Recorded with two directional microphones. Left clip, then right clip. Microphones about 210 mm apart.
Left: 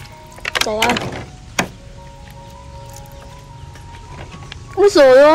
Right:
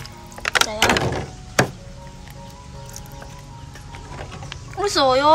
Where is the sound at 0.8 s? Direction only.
50° right (ahead or behind).